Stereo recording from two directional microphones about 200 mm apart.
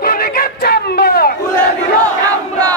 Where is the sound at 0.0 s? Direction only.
45° left (ahead or behind).